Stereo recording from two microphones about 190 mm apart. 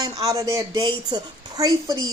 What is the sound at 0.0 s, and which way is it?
A woman's voice, 15° right (ahead or behind).